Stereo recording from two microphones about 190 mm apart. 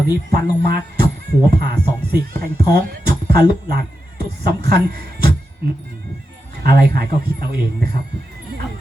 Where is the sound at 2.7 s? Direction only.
55° right (ahead or behind).